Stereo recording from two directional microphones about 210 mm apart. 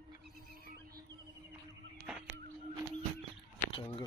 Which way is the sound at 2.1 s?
5° right (ahead or behind).